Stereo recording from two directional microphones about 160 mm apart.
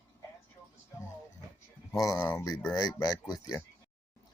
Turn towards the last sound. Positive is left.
turn(degrees=25)  # may be behind; listen again after turning